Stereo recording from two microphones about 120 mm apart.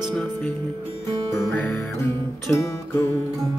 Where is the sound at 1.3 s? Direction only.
20° left (ahead or behind).